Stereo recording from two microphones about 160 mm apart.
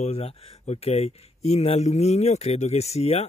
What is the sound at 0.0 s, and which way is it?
Speech, 40° left (ahead or behind).